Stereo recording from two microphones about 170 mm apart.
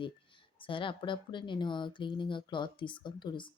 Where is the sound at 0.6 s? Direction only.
30° left (ahead or behind).